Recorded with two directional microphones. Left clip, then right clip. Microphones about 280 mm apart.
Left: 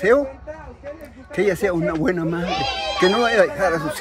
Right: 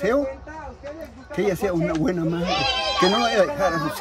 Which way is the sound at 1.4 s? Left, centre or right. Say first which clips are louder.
Left 3 dB; centre.